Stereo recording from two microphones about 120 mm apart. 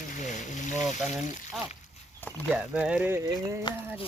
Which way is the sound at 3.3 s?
25° right (ahead or behind).